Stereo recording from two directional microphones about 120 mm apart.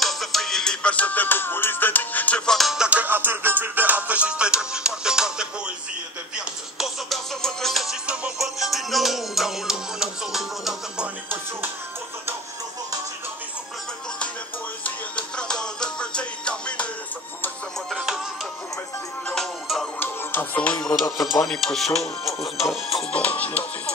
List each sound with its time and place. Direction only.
0.0 s music: centre (ahead or behind)
14.8 s music: 10° left (ahead or behind)
17.8 s music: 5° right (ahead or behind)
19.2 s music: 5° left (ahead or behind)
20.0 s music: 15° left (ahead or behind)
21.3 s music: 5° left (ahead or behind)